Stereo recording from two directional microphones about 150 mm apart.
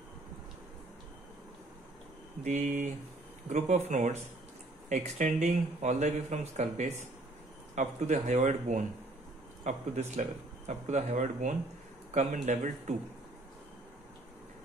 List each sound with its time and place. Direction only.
2.4 s speech: 55° right (ahead or behind)
3.4 s speech: 50° right (ahead or behind)